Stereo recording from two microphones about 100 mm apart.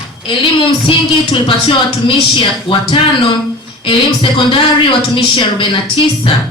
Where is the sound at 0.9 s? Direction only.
60° left (ahead or behind).